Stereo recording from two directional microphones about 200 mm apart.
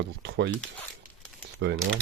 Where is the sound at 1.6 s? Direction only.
60° right (ahead or behind).